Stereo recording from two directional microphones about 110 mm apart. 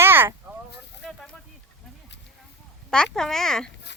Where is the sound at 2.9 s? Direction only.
5° left (ahead or behind).